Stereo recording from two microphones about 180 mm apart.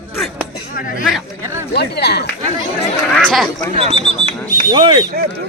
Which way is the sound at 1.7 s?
65° left (ahead or behind).